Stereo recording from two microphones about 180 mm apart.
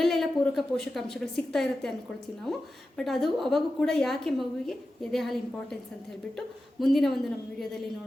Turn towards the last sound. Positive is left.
turn(degrees=0)  # may be behind; listen again after turning